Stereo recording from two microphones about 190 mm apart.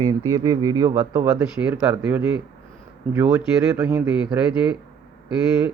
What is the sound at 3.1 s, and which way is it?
Speech, 10° right (ahead or behind).